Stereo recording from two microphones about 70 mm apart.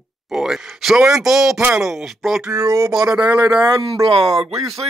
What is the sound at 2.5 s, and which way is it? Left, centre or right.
Speech, right.